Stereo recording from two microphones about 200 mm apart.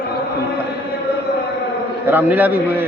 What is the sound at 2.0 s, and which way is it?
Speech, 10° right (ahead or behind).